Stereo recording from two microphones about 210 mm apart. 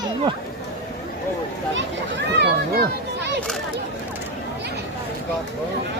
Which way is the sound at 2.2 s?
55° right (ahead or behind).